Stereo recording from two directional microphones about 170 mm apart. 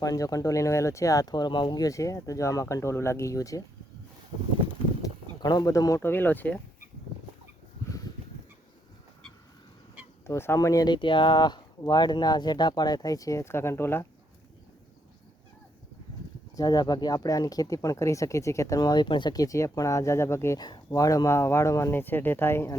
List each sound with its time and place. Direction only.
0.0 s speech: 20° left (ahead or behind)
5.0 s speech: 20° left (ahead or behind)
10.2 s speech: 15° left (ahead or behind)
16.6 s speech: 20° left (ahead or behind)